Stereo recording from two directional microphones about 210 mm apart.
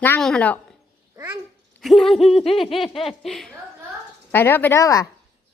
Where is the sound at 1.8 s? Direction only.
Centre (ahead or behind).